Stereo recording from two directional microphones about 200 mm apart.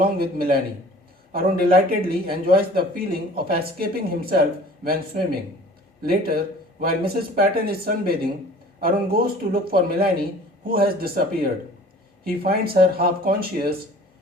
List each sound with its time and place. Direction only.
0.0 s speech: 50° right (ahead or behind)